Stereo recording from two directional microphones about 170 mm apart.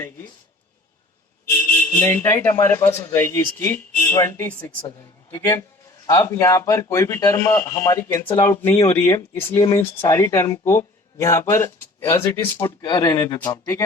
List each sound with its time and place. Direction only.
2.0 s a man's voice: 15° left (ahead or behind)
9.8 s speech: 30° left (ahead or behind)
10.2 s a man's voice: 15° left (ahead or behind)